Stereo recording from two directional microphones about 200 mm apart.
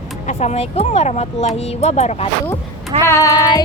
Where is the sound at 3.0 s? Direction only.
15° left (ahead or behind).